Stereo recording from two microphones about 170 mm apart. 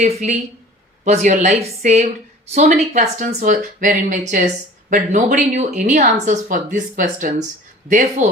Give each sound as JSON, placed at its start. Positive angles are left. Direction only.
{"t": 0.0, "sound": "speech", "side_deg": -45}